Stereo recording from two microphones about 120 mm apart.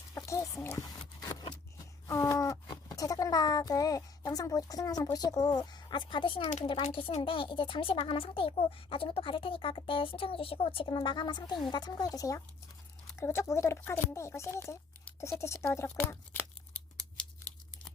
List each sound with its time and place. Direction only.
0.1 s a sound: 25° left (ahead or behind)
5.1 s speech: 30° left (ahead or behind)
6.4 s speech: 70° left (ahead or behind)
6.7 s a child's voice: 50° left (ahead or behind); by 14.8 s 20° left (ahead or behind)
15.2 s tearing: 25° left (ahead or behind)